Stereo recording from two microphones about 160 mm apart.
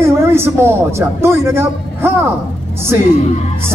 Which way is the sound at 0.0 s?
15° right (ahead or behind).